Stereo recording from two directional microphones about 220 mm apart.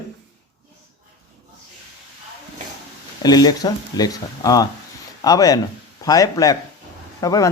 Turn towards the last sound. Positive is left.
turn(degrees=15)  # may be behind; listen again after turning